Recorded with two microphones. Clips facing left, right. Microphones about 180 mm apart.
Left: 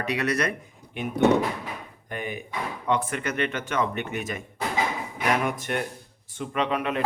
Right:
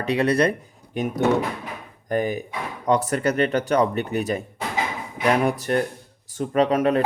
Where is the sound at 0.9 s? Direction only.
40° right (ahead or behind).